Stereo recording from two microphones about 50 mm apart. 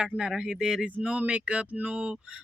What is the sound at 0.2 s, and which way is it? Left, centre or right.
Speech, centre.